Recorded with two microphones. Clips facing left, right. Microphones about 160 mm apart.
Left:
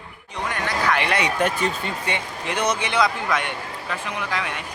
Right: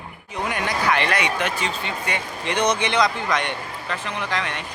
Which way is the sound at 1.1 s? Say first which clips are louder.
Even; 30° left (ahead or behind).